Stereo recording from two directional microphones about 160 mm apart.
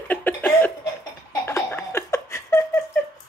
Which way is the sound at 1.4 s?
15° left (ahead or behind).